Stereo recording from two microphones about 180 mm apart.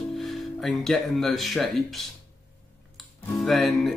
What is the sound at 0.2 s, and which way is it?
Speech, centre (ahead or behind).